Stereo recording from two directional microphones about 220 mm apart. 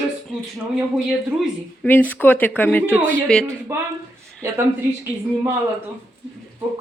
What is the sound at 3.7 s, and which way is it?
Speech, 10° right (ahead or behind).